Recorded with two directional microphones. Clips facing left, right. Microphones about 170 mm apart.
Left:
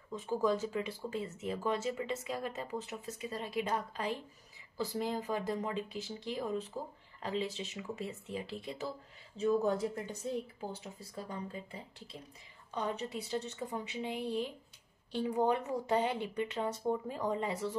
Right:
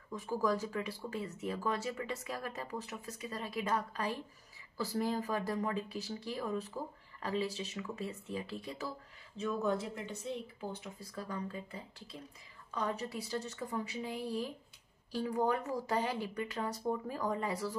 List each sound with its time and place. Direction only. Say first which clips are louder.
0.1 s speech: left 2 dB; 25° left (ahead or behind)